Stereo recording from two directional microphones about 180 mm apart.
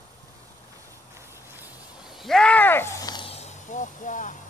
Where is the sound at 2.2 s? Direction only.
5° left (ahead or behind); by 4.3 s 45° left (ahead or behind).